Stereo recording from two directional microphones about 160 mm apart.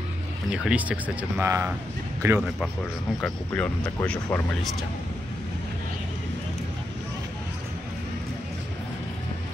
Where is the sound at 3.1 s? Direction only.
10° left (ahead or behind).